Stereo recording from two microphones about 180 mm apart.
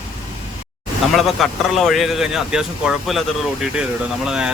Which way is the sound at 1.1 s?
Centre (ahead or behind).